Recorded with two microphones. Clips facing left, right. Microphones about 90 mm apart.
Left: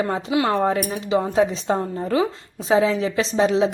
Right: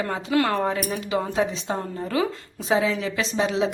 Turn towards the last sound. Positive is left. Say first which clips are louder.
# left 5 dB
turn(degrees=35)  # may be behind; listen again after turning